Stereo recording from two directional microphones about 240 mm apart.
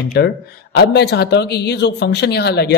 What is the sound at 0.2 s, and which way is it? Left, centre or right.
Speech, left.